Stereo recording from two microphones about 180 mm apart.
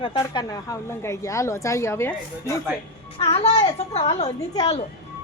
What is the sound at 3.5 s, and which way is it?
Speech, 20° left (ahead or behind).